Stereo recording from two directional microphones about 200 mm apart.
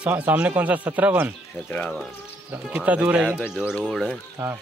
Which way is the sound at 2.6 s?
5° right (ahead or behind).